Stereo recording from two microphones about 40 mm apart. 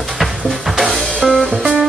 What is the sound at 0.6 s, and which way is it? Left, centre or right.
Drum kit, centre.